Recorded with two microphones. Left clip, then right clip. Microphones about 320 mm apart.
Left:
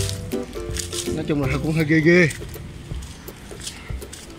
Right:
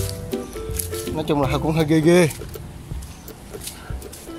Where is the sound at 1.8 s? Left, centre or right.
Right.